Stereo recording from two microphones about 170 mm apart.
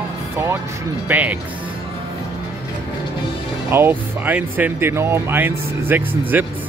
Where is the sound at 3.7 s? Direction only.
10° right (ahead or behind).